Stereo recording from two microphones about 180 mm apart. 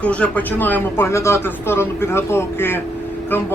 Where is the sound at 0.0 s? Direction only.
5° left (ahead or behind).